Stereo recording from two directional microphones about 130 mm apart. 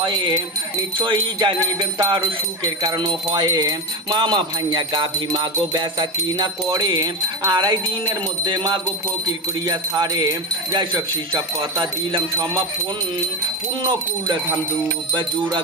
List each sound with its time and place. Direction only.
0.0 s jingle bell: 35° right (ahead or behind)
9.6 s speech: 30° right (ahead or behind)
11.8 s jingle bell: 35° right (ahead or behind)
15.1 s jingle bell: 35° right (ahead or behind)